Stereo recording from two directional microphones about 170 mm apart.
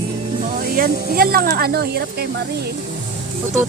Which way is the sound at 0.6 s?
60° right (ahead or behind).